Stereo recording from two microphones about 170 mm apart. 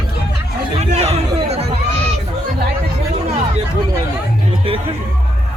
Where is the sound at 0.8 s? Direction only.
40° right (ahead or behind).